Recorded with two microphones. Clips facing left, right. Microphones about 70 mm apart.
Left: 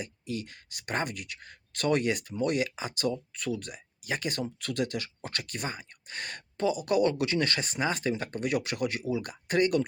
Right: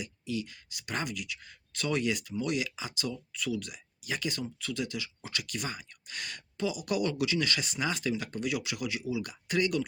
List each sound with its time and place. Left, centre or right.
0.0 s speech: left